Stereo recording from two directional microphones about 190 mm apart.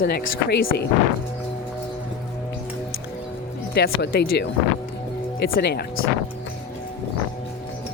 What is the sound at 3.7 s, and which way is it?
Speech, 60° left (ahead or behind).